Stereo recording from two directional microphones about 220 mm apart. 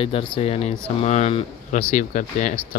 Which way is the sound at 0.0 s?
25° left (ahead or behind).